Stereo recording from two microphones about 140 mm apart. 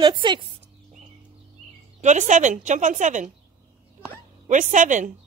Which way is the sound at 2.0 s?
60° right (ahead or behind).